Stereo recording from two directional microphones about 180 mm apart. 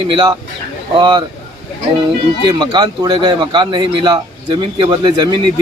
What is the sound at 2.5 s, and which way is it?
Speech, 25° right (ahead or behind).